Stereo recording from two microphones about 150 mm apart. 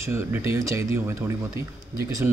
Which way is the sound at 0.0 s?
15° right (ahead or behind).